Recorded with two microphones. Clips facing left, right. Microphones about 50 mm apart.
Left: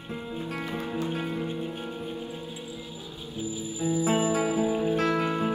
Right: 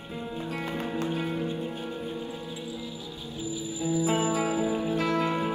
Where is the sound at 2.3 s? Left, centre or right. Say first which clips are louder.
Right 1 dB; left.